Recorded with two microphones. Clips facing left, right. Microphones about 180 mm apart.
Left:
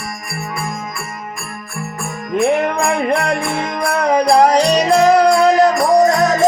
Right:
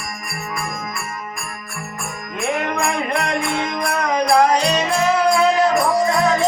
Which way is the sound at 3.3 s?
30° left (ahead or behind).